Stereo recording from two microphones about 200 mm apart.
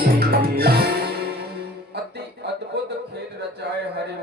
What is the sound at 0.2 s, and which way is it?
Music, 50° right (ahead or behind).